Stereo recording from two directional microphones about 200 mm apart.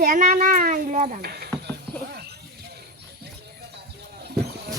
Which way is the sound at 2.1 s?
50° right (ahead or behind).